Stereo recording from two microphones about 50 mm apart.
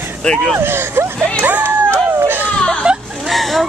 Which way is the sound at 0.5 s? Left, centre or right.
Right.